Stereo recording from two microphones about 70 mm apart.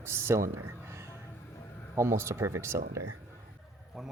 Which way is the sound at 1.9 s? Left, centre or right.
Right.